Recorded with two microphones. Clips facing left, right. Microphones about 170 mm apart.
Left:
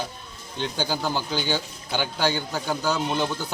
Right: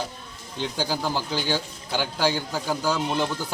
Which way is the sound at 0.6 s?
Centre (ahead or behind).